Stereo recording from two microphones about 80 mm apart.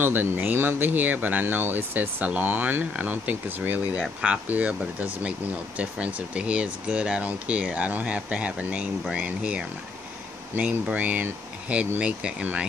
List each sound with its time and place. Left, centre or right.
0.0 s speech: right